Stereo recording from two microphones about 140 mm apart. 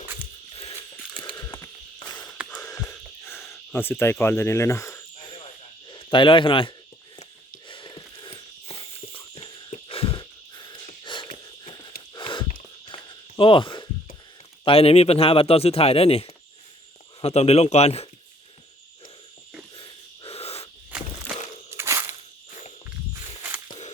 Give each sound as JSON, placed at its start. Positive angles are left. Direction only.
{"t": 0.5, "sound": "a sound", "side_deg": 45}
{"t": 1.4, "sound": "a sound", "side_deg": 20}
{"t": 2.6, "sound": "music", "side_deg": 20}
{"t": 2.9, "sound": "cricket", "side_deg": 15}
{"t": 5.9, "sound": "speech", "side_deg": 35}
{"t": 7.7, "sound": "a sound", "side_deg": 35}
{"t": 12.8, "sound": "walk", "side_deg": 35}
{"t": 14.6, "sound": "a man's voice", "side_deg": 45}
{"t": 19.7, "sound": "wheeze", "side_deg": 40}
{"t": 21.7, "sound": "walk", "side_deg": -20}